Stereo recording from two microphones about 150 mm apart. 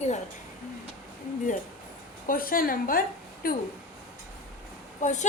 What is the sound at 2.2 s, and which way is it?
A woman's voice, 70° left (ahead or behind).